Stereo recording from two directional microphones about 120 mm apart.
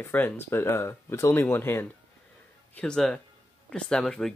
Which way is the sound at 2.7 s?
5° left (ahead or behind).